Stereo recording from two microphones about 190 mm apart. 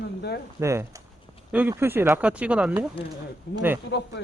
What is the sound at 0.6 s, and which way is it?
Speech, 15° right (ahead or behind).